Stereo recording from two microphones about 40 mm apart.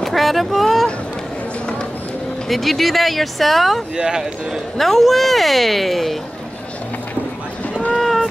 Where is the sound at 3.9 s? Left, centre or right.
Centre.